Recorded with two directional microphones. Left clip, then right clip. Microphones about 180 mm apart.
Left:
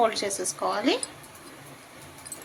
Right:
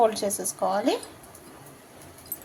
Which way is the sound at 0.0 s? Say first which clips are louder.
Right 2 dB; 35° right (ahead or behind).